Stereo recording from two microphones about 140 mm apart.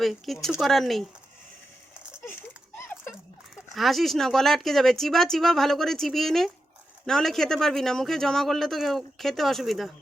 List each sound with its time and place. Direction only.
0.0 s speech: centre (ahead or behind)
2.7 s a sound: 15° left (ahead or behind)
3.5 s speech: centre (ahead or behind)